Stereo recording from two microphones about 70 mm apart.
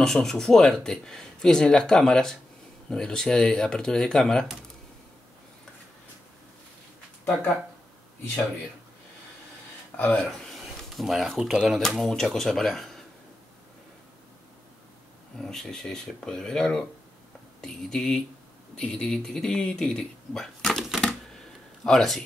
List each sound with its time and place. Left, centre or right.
0.0 s speech: centre
9.9 s speech: left
10.4 s speech: centre
15.3 s speech: centre